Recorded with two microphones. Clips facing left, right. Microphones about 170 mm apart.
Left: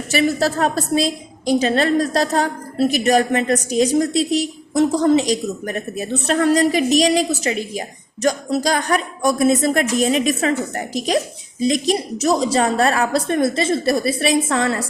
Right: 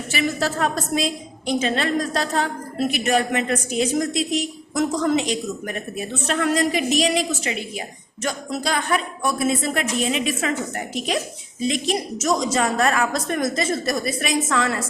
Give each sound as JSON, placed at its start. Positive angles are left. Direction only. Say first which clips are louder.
{"t": 0.1, "sound": "a woman's voice", "louder": "left 6 dB", "side_deg": 35}